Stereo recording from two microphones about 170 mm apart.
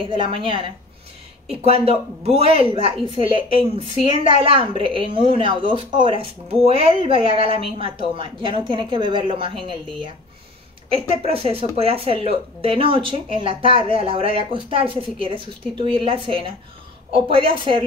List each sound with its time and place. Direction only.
0.0 s a woman's voice: 30° right (ahead or behind)